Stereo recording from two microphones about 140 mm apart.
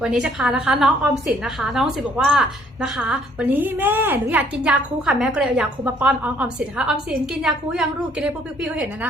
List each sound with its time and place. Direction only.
0.0 s a woman's voice: 5° right (ahead or behind)
3.5 s a woman's voice: 15° right (ahead or behind)